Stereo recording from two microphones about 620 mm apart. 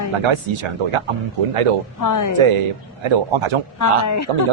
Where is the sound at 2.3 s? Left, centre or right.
Right.